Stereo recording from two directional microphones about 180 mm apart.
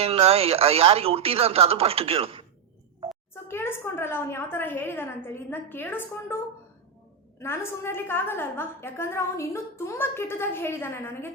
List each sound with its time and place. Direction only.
0.0 s speech: 35° right (ahead or behind)
3.5 s a woman's voice: 10° left (ahead or behind)